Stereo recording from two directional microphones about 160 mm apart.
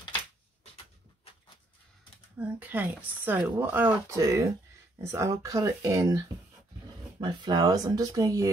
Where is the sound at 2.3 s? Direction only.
10° right (ahead or behind).